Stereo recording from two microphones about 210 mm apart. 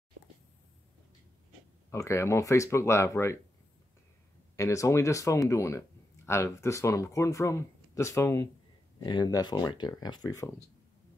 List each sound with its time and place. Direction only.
1.9 s speech: 15° left (ahead or behind)
4.6 s speech: 15° left (ahead or behind)